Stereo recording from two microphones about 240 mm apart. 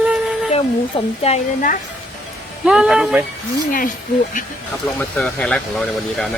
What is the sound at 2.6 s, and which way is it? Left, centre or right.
Speech, centre.